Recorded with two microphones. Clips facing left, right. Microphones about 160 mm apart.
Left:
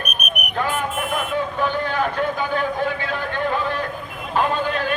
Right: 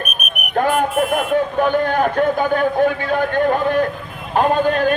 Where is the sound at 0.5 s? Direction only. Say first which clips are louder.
Right 8 dB; 50° right (ahead or behind).